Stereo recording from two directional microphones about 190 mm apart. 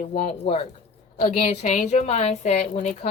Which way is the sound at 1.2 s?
30° left (ahead or behind).